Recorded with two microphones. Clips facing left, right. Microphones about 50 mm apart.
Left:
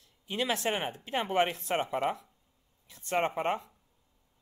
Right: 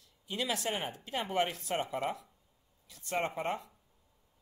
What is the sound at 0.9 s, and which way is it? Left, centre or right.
A man's voice, left.